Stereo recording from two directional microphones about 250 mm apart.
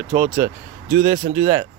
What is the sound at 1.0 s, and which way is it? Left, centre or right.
Speech, right.